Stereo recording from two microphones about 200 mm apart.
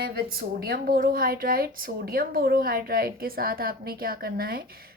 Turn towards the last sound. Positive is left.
turn(degrees=-50)  # may be behind; listen again after turning